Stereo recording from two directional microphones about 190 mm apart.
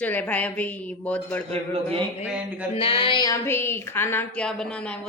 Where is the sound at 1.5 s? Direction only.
30° right (ahead or behind).